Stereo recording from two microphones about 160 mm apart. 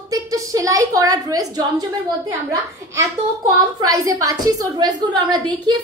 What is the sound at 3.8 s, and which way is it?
A woman's voice, 20° right (ahead or behind).